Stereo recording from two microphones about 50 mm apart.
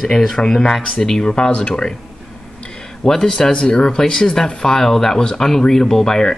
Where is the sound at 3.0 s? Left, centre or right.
Centre.